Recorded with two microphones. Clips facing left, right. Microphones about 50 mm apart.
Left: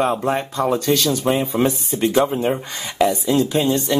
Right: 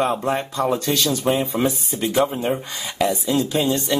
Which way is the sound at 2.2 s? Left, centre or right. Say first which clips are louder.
Left 2 dB; centre.